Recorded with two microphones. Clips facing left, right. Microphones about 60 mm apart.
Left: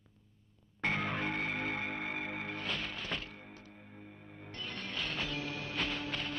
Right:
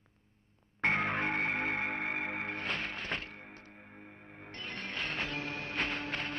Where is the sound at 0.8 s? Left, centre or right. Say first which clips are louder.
Right 4 dB; right.